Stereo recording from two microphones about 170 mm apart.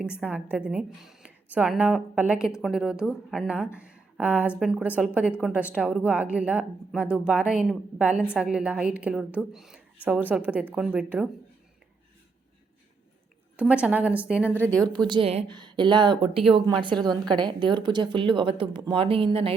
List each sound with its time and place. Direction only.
0.0 s a woman's voice: 10° right (ahead or behind)
13.6 s a woman's voice: 5° right (ahead or behind)
14.9 s a woman's voice: 25° right (ahead or behind)